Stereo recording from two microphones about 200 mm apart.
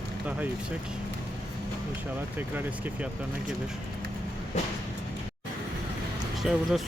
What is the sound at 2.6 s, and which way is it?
Speech, 10° right (ahead or behind).